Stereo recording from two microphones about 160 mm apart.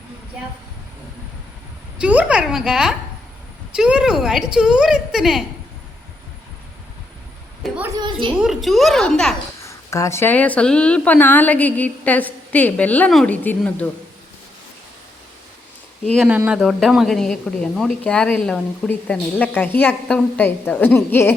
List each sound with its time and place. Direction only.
2.0 s a woman's voice: 5° right (ahead or behind)
7.9 s a sound: 30° right (ahead or behind)
8.4 s a woman's voice: centre (ahead or behind)
9.6 s a woman's voice: 20° left (ahead or behind)
16.0 s a woman's voice: centre (ahead or behind); by 21.3 s 15° left (ahead or behind)